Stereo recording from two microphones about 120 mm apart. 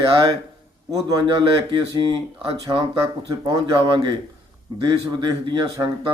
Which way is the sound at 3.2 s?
35° right (ahead or behind).